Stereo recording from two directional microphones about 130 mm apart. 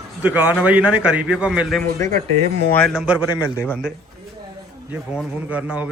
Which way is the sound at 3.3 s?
25° left (ahead or behind).